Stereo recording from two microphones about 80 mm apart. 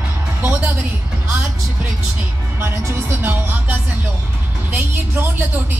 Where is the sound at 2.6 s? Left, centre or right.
Right.